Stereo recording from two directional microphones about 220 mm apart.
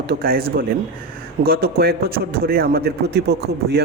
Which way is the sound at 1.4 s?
45° right (ahead or behind).